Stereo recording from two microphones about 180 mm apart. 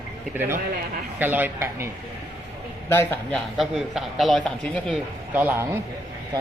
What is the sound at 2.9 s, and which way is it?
A man's voice, 10° left (ahead or behind).